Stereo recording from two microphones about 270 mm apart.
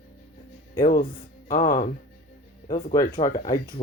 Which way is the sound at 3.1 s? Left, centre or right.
Left.